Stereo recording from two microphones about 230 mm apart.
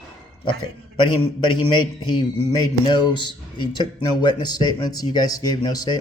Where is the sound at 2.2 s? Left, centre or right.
Centre.